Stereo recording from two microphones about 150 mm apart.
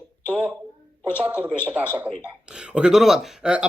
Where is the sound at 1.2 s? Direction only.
10° right (ahead or behind).